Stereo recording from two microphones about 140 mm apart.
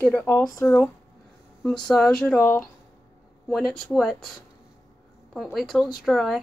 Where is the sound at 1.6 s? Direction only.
5° left (ahead or behind).